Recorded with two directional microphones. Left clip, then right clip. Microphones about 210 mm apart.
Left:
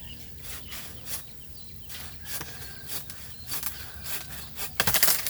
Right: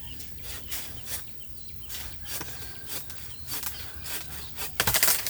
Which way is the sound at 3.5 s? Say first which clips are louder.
Even; centre (ahead or behind).